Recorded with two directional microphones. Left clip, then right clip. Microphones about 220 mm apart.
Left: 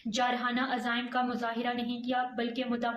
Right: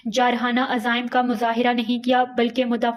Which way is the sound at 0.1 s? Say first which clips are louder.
Right 10 dB; 40° right (ahead or behind).